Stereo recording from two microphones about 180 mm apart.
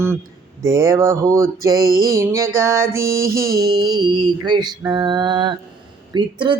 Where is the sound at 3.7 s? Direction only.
25° right (ahead or behind).